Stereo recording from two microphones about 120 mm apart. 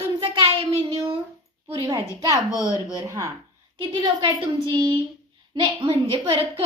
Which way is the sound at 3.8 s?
40° right (ahead or behind).